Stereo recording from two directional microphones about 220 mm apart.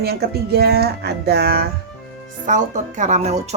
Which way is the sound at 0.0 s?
45° right (ahead or behind).